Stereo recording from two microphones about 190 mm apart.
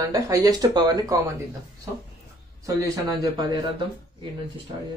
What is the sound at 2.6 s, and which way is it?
Speech, 15° right (ahead or behind).